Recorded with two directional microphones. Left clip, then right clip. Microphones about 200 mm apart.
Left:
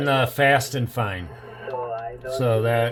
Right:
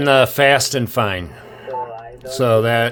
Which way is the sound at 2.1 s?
60° right (ahead or behind).